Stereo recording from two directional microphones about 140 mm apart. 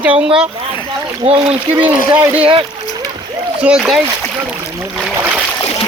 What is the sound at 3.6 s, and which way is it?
Speech, 5° right (ahead or behind).